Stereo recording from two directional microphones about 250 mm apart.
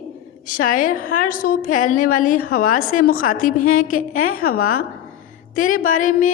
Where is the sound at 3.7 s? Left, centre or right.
Left.